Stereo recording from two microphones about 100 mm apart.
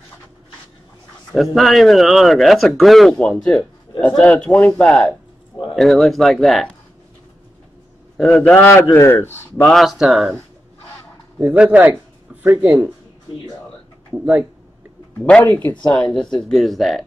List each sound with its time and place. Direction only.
1.3 s a man's voice: centre (ahead or behind)
4.2 s a man's voice: 10° left (ahead or behind)
8.2 s a man's voice: 10° left (ahead or behind)
9.7 s a man's voice: centre (ahead or behind)
11.3 s speech: 10° right (ahead or behind)
14.1 s speech: 10° right (ahead or behind)
15.1 s a man's voice: 15° left (ahead or behind)